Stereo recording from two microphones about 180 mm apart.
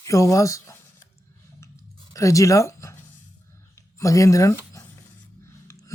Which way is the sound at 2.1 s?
20° left (ahead or behind).